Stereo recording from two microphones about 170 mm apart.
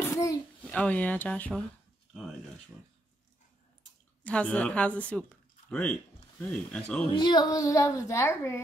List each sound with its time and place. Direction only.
0.1 s a sound: 20° left (ahead or behind)
0.7 s speech: 5° left (ahead or behind)
4.2 s speech: 5° left (ahead or behind)
7.2 s a child's voice: 25° left (ahead or behind)